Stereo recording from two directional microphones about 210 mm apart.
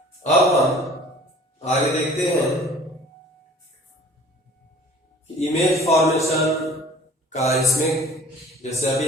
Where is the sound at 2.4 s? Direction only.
Centre (ahead or behind).